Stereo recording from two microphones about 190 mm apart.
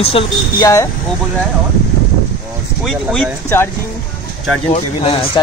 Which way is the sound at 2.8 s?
Centre (ahead or behind).